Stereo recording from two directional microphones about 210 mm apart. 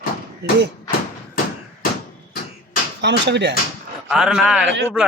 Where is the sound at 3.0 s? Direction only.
55° right (ahead or behind).